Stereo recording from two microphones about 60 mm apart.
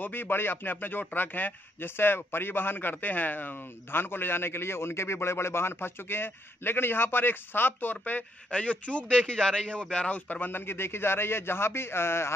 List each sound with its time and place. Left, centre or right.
0.0 s a man's voice: left